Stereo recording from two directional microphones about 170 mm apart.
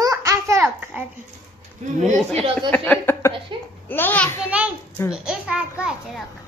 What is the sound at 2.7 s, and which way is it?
Speech, 10° left (ahead or behind).